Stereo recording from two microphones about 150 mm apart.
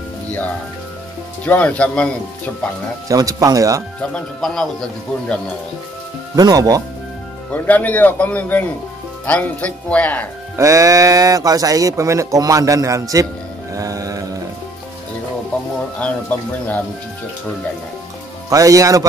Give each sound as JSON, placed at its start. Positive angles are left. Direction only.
{"t": 1.4, "sound": "speech", "side_deg": 10}
{"t": 3.1, "sound": "speech", "side_deg": -25}
{"t": 4.0, "sound": "speech", "side_deg": 5}
{"t": 6.3, "sound": "speech", "side_deg": -25}
{"t": 7.5, "sound": "speech", "side_deg": 10}
{"t": 10.5, "sound": "speech", "side_deg": -20}
{"t": 13.7, "sound": "music", "side_deg": -20}
{"t": 16.0, "sound": "speech", "side_deg": 10}
{"t": 18.5, "sound": "speech", "side_deg": -20}